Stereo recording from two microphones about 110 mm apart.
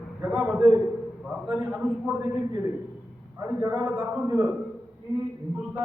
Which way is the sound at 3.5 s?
20° right (ahead or behind).